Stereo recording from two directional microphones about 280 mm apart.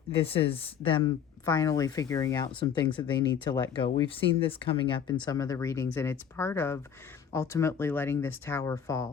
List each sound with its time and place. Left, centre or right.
0.2 s speech: left